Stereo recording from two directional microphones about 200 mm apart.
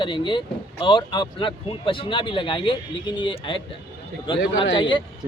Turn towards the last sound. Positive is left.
turn(degrees=25)  # may be behind; listen again after turning